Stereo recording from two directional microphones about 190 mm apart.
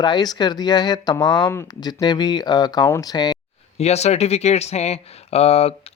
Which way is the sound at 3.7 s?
35° left (ahead or behind).